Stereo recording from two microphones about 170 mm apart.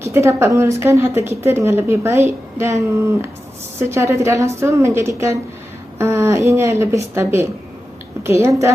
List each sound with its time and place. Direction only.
0.0 s a woman's voice: 15° right (ahead or behind)